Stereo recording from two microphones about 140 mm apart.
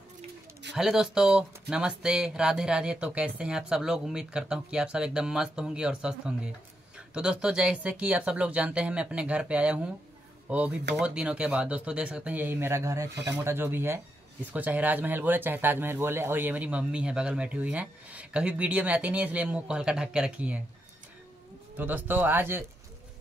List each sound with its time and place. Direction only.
0.7 s speech: 5° right (ahead or behind)
21.7 s speech: 15° right (ahead or behind)